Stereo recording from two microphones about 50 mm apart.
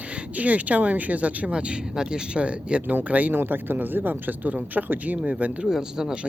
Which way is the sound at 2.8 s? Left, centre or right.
Right.